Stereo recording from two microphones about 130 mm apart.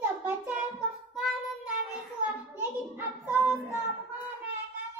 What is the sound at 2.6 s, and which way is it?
Child singing, 15° right (ahead or behind).